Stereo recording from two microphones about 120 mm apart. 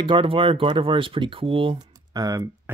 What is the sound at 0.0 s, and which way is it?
Speech, 45° right (ahead or behind).